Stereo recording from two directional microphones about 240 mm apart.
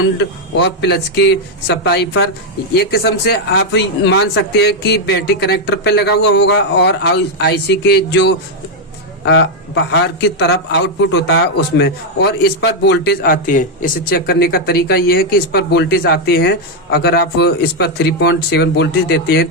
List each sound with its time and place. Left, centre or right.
0.5 s a man's voice: left